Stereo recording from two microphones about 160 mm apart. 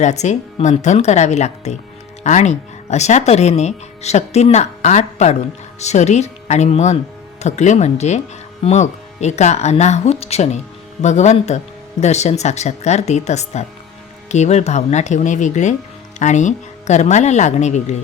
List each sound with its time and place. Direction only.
0.0 s speech: 45° left (ahead or behind)